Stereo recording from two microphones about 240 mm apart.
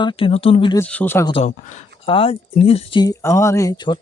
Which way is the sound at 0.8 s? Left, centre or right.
Centre.